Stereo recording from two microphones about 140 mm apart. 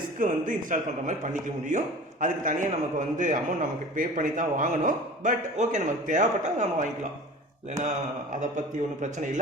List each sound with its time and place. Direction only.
0.2 s a man's voice: 65° right (ahead or behind)